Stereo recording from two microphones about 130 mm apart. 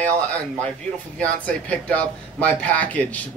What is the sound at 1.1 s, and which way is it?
Speech, 10° left (ahead or behind).